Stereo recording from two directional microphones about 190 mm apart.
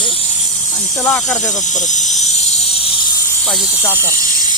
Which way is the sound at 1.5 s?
40° left (ahead or behind).